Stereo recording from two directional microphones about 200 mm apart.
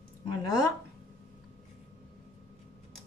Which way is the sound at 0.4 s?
20° left (ahead or behind).